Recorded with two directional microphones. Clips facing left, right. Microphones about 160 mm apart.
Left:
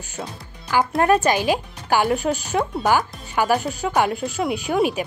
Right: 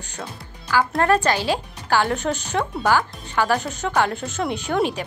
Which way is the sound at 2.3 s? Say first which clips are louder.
Left 2 dB; 40° left (ahead or behind).